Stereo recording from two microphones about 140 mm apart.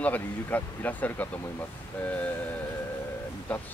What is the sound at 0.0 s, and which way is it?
Speech, 10° left (ahead or behind).